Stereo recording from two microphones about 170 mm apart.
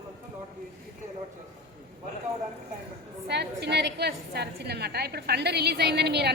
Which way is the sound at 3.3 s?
80° right.